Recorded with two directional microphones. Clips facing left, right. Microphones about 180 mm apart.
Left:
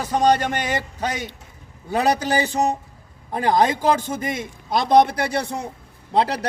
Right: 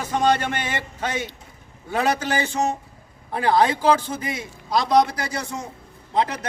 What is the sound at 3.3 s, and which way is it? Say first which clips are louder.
Speech: even; 15° left (ahead or behind).